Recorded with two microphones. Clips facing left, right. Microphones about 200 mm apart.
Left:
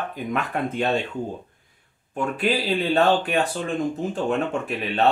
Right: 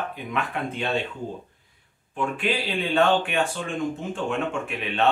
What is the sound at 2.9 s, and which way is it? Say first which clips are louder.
Speech: even; 35° left (ahead or behind).